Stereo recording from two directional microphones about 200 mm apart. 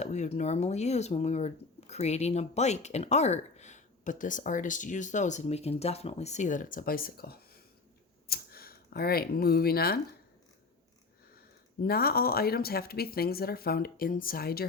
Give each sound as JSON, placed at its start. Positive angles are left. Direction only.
{"t": 0.0, "sound": "speech", "side_deg": 35}
{"t": 11.3, "sound": "speech", "side_deg": 50}